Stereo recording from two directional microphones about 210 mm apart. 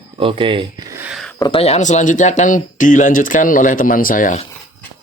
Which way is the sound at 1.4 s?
25° left (ahead or behind).